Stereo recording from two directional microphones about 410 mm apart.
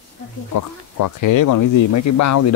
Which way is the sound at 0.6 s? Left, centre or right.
Left.